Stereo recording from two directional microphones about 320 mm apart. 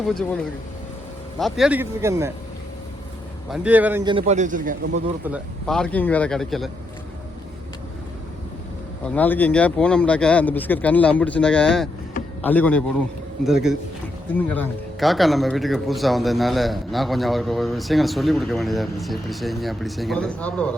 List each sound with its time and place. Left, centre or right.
0.1 s speech: centre
1.4 s speech: centre
3.5 s a man's voice: centre; by 4.9 s right
5.2 s speech: centre
9.0 s speech: centre